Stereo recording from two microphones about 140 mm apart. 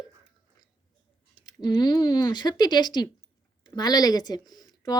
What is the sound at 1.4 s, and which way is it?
Speech, 30° left (ahead or behind).